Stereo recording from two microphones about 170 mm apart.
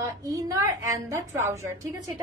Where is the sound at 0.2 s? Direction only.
20° right (ahead or behind).